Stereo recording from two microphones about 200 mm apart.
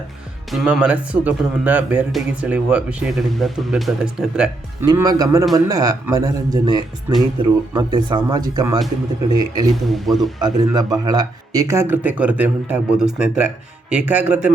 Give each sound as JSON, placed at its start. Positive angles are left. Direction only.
{"t": 0.5, "sound": "speech", "side_deg": -5}
{"t": 4.9, "sound": "speech", "side_deg": -20}
{"t": 9.8, "sound": "speech", "side_deg": 0}
{"t": 10.4, "sound": "speech", "side_deg": -20}